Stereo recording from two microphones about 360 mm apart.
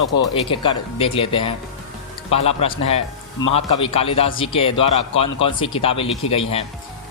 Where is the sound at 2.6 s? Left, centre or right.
Centre.